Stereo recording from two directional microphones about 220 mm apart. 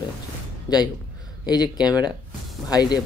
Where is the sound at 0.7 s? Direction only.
20° left (ahead or behind).